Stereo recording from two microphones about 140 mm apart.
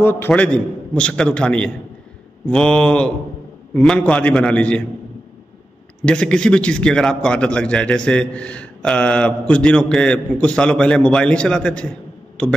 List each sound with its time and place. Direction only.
0.0 s a man's voice: 15° left (ahead or behind)
6.0 s a man's voice: 5° left (ahead or behind)